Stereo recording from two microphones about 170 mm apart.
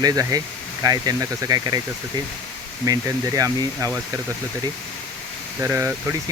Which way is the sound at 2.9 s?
20° right (ahead or behind).